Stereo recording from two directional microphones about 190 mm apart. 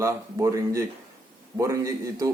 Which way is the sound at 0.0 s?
15° right (ahead or behind).